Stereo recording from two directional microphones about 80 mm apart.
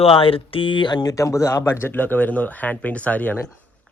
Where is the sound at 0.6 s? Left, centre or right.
Left.